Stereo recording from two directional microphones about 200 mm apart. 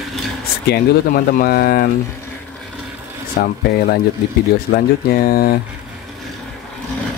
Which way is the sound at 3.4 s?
50° left (ahead or behind).